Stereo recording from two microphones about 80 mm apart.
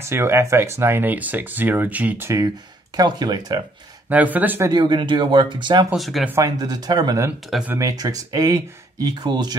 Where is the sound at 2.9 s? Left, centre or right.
Right.